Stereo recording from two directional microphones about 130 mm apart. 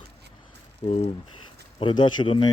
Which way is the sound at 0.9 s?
50° left (ahead or behind).